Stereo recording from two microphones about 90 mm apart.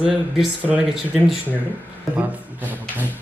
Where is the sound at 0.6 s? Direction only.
15° right (ahead or behind).